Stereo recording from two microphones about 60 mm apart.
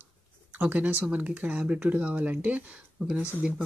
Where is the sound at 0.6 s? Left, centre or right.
Right.